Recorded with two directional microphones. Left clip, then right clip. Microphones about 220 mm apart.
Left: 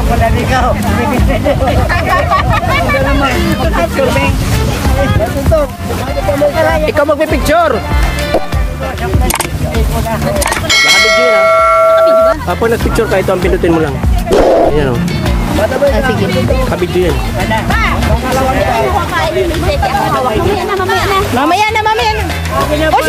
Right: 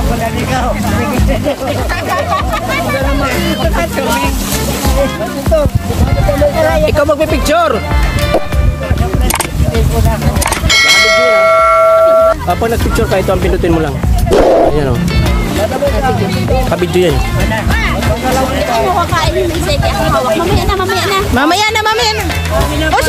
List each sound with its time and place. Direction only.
2.0 s speech: 10° left (ahead or behind)
7.0 s speech: 5° right (ahead or behind)
10.7 s bell: centre (ahead or behind)
14.3 s speech: centre (ahead or behind)
21.4 s speech: 15° right (ahead or behind)